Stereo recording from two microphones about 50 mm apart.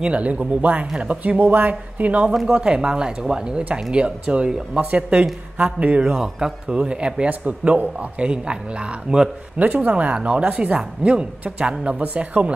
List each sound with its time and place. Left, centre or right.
0.0 s speech: right
2.5 s speech: right
7.2 s speech: right
9.6 s speech: right
12.0 s speech: right